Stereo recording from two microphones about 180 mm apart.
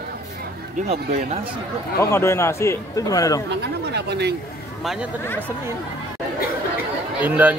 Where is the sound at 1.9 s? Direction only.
15° left (ahead or behind).